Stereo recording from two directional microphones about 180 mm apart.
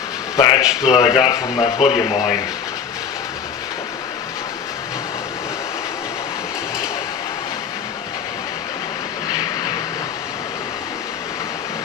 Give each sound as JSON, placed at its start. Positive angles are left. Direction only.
{"t": 0.3, "sound": "a man's voice", "side_deg": 25}
{"t": 0.6, "sound": "speech", "side_deg": -5}
{"t": 0.9, "sound": "speech", "side_deg": 20}